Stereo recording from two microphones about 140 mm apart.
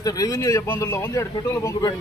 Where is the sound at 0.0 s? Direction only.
25° left (ahead or behind).